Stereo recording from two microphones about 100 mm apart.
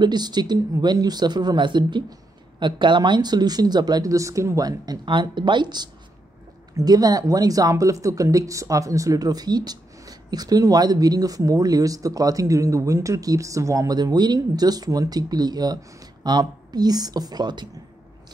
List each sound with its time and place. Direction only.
0.0 s speech: 45° right (ahead or behind)